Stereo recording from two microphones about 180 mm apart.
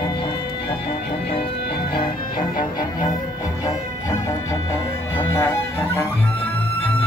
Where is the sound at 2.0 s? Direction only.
25° left (ahead or behind).